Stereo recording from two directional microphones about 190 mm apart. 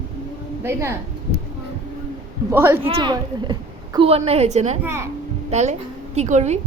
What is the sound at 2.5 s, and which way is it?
Speech, 10° right (ahead or behind).